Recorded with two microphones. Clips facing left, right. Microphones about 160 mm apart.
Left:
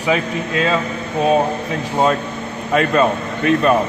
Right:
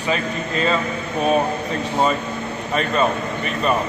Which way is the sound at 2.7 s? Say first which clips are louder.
Left 5 dB; 85° left.